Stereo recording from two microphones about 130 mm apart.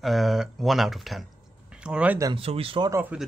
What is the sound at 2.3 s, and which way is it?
Speech, 45° right (ahead or behind).